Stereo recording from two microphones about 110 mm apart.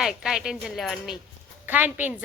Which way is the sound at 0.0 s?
5° right (ahead or behind).